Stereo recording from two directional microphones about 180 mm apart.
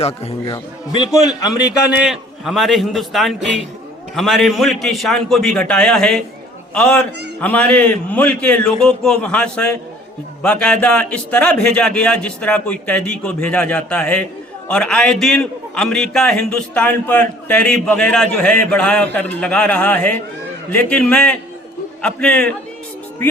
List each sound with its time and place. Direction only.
0.0 s a man's voice: 30° left (ahead or behind)
1.9 s a man's voice: 5° right (ahead or behind)